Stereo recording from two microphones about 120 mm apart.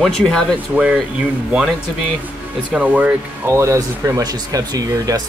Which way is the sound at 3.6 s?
25° right (ahead or behind).